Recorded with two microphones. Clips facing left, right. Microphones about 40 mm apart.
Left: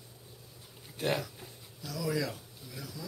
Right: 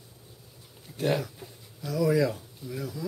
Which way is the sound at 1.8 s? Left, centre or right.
Right.